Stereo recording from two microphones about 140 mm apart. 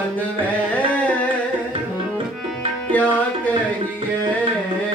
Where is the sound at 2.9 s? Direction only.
10° left (ahead or behind).